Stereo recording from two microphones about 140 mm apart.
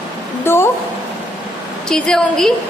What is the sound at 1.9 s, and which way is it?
Speech, 5° left (ahead or behind).